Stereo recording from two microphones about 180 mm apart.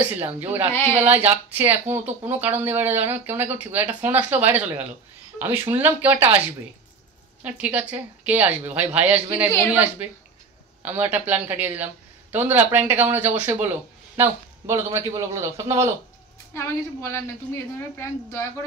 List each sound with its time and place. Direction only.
0.4 s speech: 10° right (ahead or behind)
7.4 s speech: 10° right (ahead or behind)
10.8 s speech: 10° right (ahead or behind)
16.5 s a woman's voice: 15° left (ahead or behind)